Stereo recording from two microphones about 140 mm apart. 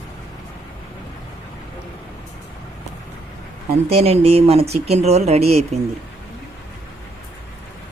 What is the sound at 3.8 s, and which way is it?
Speech, 45° right (ahead or behind).